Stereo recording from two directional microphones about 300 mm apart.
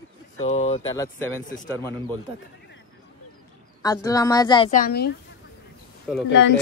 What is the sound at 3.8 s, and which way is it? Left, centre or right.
Speech, centre.